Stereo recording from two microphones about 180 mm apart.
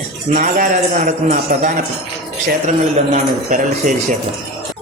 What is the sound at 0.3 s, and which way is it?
A man's voice, 45° right (ahead or behind).